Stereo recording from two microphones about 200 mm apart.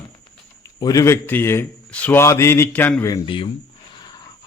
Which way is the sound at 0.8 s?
15° left (ahead or behind).